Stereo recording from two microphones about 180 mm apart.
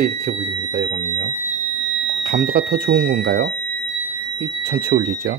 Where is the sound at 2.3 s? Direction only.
55° right (ahead or behind).